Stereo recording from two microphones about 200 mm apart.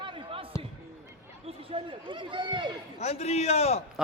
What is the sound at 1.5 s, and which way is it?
Speech, 30° right (ahead or behind).